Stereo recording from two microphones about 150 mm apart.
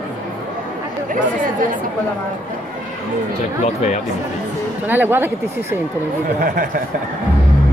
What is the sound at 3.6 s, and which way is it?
Speech, 50° left (ahead or behind).